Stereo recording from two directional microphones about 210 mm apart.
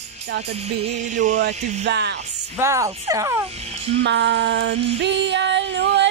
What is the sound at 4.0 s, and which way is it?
Female singing, 55° right (ahead or behind).